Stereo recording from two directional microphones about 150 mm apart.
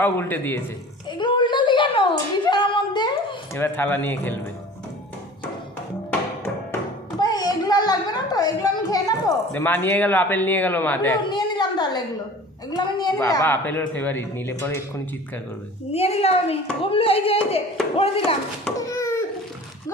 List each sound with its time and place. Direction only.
0.0 s a man's voice: 15° left (ahead or behind)
1.2 s a sound: 30° left (ahead or behind)
3.5 s a man's voice: 15° left (ahead or behind)
7.2 s a child's voice: 25° left (ahead or behind)
9.5 s a man's voice: 15° left (ahead or behind)
11.3 s a sound: 30° left (ahead or behind)
12.7 s a woman's voice: 30° left (ahead or behind)
13.4 s a man's voice: 15° left (ahead or behind)
15.9 s a woman's voice: 40° left (ahead or behind)
18.9 s a sound: 20° left (ahead or behind)